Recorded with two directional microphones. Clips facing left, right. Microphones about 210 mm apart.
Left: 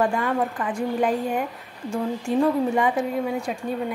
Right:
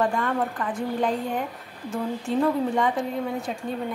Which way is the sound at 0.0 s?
Centre (ahead or behind).